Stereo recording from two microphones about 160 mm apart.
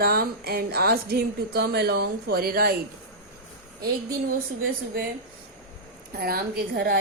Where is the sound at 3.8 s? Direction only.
70° right (ahead or behind).